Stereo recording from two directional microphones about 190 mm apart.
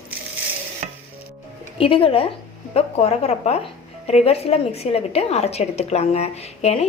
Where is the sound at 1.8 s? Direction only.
30° left (ahead or behind).